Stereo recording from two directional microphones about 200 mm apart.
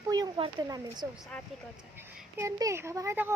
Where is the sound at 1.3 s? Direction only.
5° left (ahead or behind).